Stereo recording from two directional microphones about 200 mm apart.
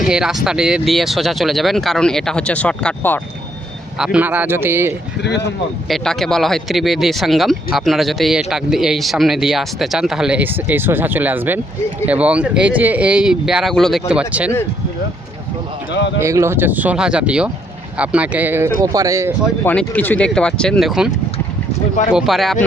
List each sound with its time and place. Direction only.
0.0 s speech: 5° right (ahead or behind)
3.9 s speech: 5° right (ahead or behind)
5.9 s speech: centre (ahead or behind)
15.9 s a man's voice: 60° left (ahead or behind)
16.2 s speech: 15° right (ahead or behind)
19.6 s speech: 10° left (ahead or behind)
22.1 s speech: centre (ahead or behind)